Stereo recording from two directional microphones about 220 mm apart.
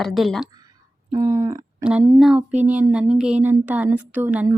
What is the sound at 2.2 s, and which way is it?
A woman's voice, 5° right (ahead or behind).